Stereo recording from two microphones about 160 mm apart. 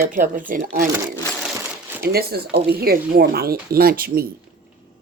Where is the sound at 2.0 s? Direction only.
75° right (ahead or behind).